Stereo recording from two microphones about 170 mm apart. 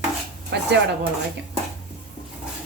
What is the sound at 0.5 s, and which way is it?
Speech, 85° right.